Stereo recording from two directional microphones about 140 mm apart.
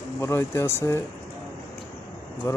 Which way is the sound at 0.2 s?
20° left (ahead or behind).